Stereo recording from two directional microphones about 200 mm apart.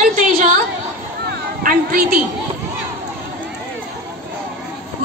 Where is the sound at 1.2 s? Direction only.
50° right (ahead or behind).